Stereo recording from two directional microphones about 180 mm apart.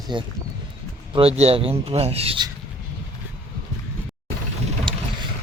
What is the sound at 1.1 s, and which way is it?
Rub, 35° right (ahead or behind).